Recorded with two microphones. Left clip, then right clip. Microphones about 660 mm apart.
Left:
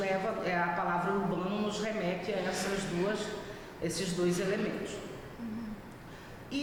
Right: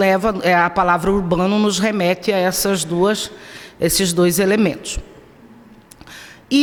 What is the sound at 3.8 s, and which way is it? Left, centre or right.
Speech, right.